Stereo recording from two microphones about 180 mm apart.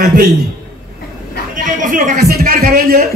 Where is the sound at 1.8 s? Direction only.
45° right (ahead or behind).